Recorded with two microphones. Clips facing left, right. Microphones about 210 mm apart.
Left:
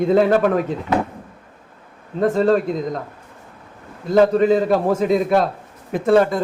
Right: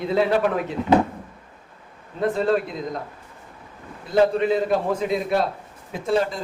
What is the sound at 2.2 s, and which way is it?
Speech, 45° left (ahead or behind).